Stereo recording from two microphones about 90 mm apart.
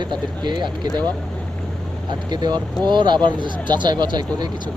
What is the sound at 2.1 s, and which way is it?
Speech, 50° right (ahead or behind).